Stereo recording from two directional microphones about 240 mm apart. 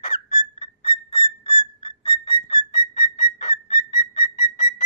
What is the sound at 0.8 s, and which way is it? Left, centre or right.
Whistle, centre.